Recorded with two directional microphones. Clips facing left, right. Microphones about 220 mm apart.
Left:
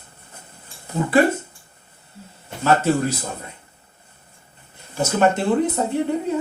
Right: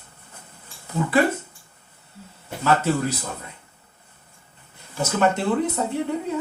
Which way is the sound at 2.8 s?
45° left (ahead or behind).